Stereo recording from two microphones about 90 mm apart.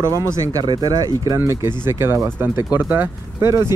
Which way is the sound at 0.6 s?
50° right (ahead or behind).